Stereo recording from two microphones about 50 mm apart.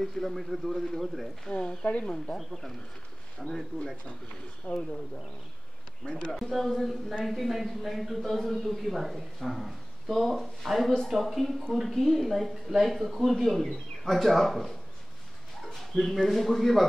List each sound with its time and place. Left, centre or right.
0.0 s speech: centre
1.4 s speech: left
2.0 s speech: centre
4.7 s speech: left
6.0 s speech: left
6.3 s speech: centre
15.8 s speech: centre